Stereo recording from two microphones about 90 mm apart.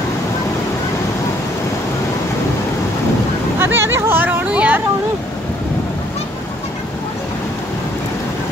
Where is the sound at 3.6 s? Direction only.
25° right (ahead or behind).